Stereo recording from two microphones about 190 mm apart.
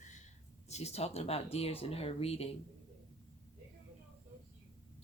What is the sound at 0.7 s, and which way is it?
Speech, 35° left (ahead or behind).